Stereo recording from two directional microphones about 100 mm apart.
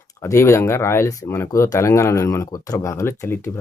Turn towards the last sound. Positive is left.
turn(degrees=25)  # may be behind; listen again after turning